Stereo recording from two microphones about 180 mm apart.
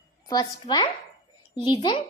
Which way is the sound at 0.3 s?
20° left (ahead or behind).